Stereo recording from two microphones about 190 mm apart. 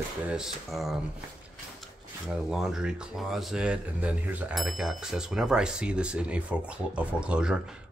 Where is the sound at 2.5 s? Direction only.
Centre (ahead or behind).